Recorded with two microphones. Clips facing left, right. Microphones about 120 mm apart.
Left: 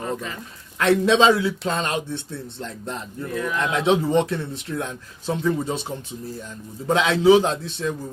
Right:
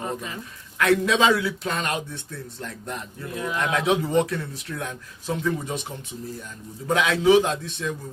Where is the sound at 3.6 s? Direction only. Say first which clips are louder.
Left 2 dB; 25° left (ahead or behind).